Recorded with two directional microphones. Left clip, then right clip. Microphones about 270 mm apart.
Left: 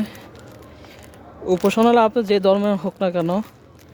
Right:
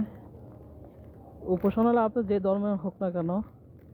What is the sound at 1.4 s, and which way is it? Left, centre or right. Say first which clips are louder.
Speech: left 9 dB; left.